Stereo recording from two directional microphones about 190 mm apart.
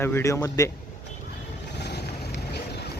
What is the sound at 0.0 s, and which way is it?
Speech, 15° left (ahead or behind).